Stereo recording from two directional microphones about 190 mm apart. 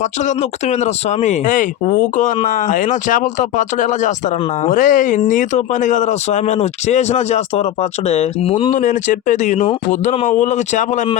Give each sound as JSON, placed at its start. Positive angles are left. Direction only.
{"t": 1.2, "sound": "speech", "side_deg": 40}